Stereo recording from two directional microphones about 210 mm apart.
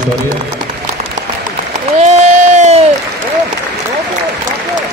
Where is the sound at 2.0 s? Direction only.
30° right (ahead or behind).